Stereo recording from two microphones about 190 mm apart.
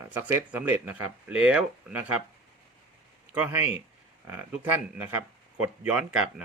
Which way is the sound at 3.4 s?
10° right (ahead or behind).